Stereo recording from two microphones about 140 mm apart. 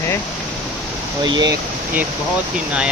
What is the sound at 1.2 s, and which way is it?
Speech, 30° right (ahead or behind).